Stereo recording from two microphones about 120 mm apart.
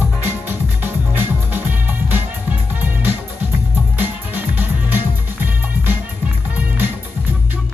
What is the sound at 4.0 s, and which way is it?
Music, 15° right (ahead or behind).